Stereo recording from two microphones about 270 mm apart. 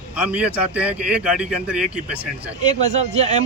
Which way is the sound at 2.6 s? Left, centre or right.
Right.